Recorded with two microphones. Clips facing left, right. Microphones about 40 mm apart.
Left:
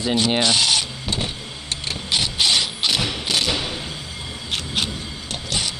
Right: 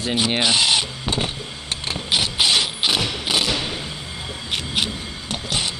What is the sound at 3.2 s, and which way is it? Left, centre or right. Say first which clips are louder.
Thump: right 1 dB; centre.